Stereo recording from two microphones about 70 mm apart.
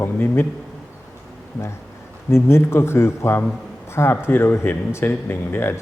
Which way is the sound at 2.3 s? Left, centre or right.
Left.